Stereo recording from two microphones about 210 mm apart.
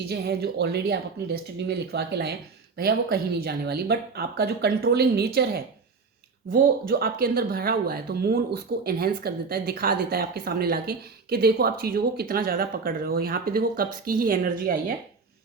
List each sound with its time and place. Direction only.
0.1 s speech: 50° right (ahead or behind)